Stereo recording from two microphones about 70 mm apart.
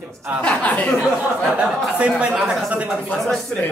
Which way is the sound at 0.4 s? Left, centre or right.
Centre.